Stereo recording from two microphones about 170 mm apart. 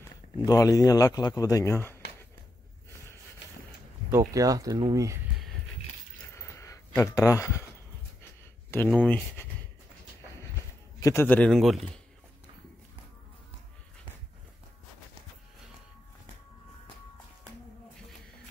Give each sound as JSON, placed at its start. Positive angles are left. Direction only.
{"t": 0.5, "sound": "a man's voice", "side_deg": 20}
{"t": 4.1, "sound": "speech", "side_deg": -20}
{"t": 6.3, "sound": "a sound", "side_deg": 15}
{"t": 7.0, "sound": "speech", "side_deg": 20}
{"t": 8.6, "sound": "speech", "side_deg": 10}
{"t": 11.0, "sound": "a man's voice", "side_deg": 20}
{"t": 11.2, "sound": "a man's voice", "side_deg": 5}